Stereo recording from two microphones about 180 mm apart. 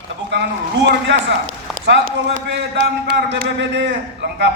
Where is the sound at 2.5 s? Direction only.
75° right (ahead or behind).